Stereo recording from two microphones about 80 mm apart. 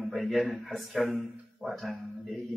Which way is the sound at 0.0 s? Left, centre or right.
Centre.